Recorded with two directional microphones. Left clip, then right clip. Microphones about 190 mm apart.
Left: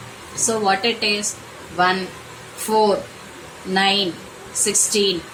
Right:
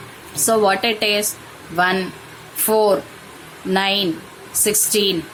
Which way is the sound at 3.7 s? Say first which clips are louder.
Even; 45° right (ahead or behind).